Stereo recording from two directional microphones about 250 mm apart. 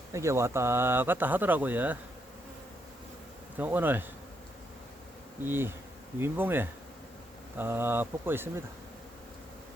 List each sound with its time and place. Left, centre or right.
0.1 s speech: centre
3.6 s speech: centre
5.4 s speech: centre